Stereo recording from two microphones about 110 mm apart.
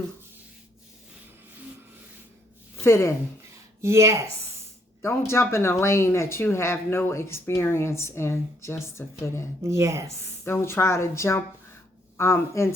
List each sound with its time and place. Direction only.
2.8 s speech: 25° left (ahead or behind)
3.8 s speech: 25° right (ahead or behind)
5.3 s speech: 25° left (ahead or behind)
9.6 s a woman's voice: 25° right (ahead or behind)
10.4 s speech: 20° left (ahead or behind)